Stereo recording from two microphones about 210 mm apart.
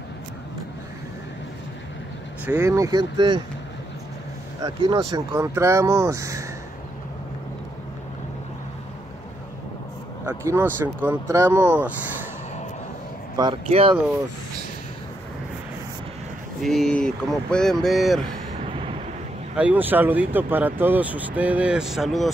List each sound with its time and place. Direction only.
2.4 s speech: 10° right (ahead or behind)
4.6 s speech: 20° right (ahead or behind)
10.2 s speech: 10° right (ahead or behind)
13.4 s speech: 25° right (ahead or behind)
16.6 s speech: centre (ahead or behind)
18.7 s vehicle: 25° right (ahead or behind)
19.5 s speech: 5° right (ahead or behind)